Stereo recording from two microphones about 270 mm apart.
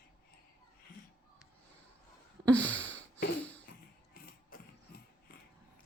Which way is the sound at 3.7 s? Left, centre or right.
Left.